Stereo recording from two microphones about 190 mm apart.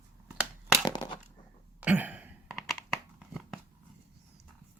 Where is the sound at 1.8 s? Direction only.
10° right (ahead or behind).